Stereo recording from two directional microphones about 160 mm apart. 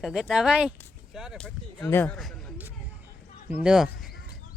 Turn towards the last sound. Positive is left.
turn(degrees=-5)  # may be behind; listen again after turning